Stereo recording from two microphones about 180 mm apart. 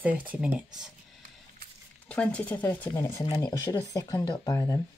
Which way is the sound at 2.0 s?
5° left (ahead or behind).